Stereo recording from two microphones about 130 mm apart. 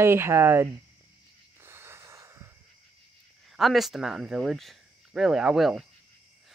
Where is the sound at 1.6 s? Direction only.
20° right (ahead or behind).